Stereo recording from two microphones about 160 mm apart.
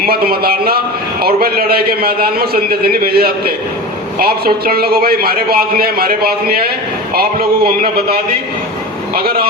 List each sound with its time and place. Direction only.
0.0 s a man's voice: 70° right (ahead or behind)
9.1 s a man's voice: 70° right (ahead or behind)